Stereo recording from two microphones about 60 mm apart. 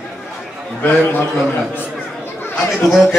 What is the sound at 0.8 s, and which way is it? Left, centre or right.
Speech, left.